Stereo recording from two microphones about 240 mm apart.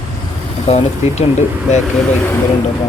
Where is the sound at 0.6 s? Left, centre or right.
Left.